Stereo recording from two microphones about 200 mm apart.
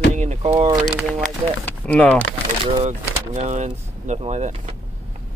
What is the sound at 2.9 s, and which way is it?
Speech, 35° right (ahead or behind).